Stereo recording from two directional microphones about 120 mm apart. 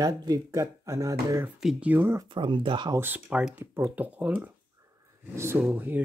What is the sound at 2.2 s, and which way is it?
Speech, 45° right (ahead or behind).